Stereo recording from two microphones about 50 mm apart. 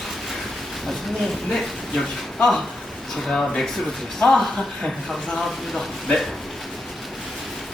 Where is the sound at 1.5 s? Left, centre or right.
Centre.